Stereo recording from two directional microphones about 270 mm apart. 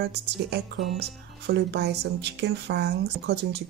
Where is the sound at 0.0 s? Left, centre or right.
Right.